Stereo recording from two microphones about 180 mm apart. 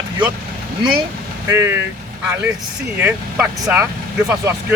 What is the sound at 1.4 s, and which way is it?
Speech, 15° right (ahead or behind).